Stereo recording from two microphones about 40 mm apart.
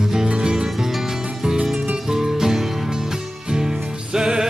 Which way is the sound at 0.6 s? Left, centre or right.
Centre.